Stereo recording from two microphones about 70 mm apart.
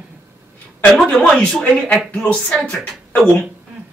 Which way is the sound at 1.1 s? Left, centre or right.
Centre.